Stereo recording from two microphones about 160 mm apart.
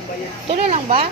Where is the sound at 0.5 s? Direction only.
40° right (ahead or behind).